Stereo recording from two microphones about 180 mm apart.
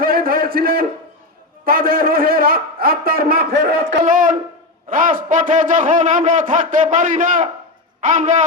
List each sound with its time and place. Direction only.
0.0 s a sound: 55° right (ahead or behind)
1.6 s a man's voice: 55° right (ahead or behind)
4.0 s a man's voice: 50° right (ahead or behind)